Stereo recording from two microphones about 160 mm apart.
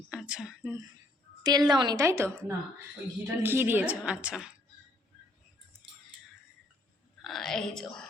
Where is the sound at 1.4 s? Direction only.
25° right (ahead or behind).